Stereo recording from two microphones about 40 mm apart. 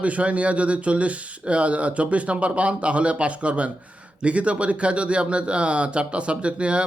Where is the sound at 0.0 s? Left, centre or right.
Right.